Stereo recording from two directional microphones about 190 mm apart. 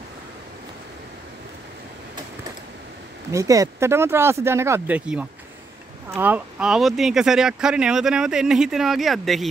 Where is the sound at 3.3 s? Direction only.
15° right (ahead or behind).